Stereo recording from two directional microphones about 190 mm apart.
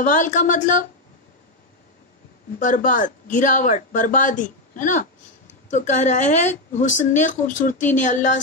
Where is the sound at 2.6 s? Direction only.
45° left (ahead or behind).